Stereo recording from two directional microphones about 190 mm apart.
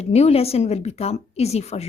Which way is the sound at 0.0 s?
35° left (ahead or behind).